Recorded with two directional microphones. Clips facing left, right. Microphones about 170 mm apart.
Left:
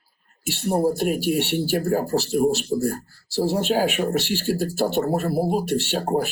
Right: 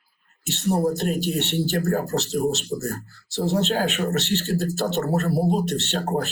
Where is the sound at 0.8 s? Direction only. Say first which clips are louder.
Left 2 dB; 10° left (ahead or behind).